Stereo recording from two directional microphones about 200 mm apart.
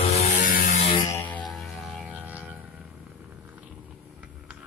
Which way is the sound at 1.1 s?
10° left (ahead or behind).